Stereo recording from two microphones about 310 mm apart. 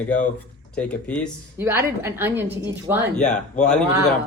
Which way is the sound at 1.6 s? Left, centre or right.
Centre.